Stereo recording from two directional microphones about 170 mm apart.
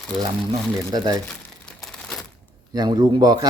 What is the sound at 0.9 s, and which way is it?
Speech, 25° right (ahead or behind).